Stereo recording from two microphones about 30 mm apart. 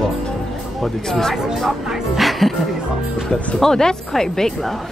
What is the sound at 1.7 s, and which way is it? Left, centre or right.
Music, centre.